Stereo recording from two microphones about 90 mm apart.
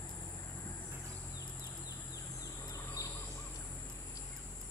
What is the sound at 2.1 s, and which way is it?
Bird, 40° left (ahead or behind).